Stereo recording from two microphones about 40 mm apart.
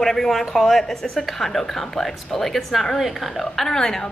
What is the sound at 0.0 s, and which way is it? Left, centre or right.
A woman's voice, centre.